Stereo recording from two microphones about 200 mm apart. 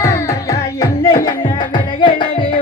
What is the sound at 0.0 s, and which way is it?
Music, 15° left (ahead or behind).